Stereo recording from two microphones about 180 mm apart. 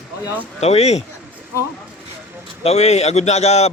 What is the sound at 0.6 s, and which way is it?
Speech, 35° left (ahead or behind).